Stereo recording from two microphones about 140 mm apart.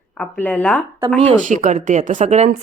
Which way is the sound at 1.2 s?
65° right (ahead or behind).